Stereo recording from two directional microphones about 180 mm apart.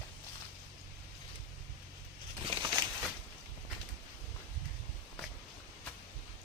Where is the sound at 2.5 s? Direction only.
25° right (ahead or behind).